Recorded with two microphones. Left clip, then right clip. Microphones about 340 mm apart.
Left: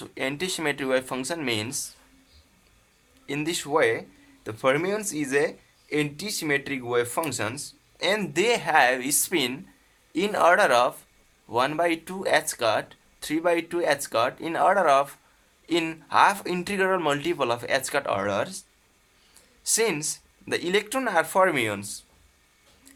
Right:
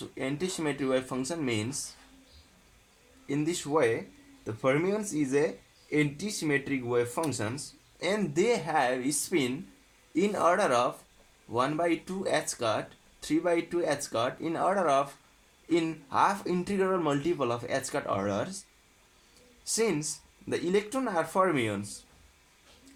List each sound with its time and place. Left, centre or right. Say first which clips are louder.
0.0 s speech: left 4 dB; left
3.2 s speech: left 3 dB; left
19.6 s speech: left 4 dB; left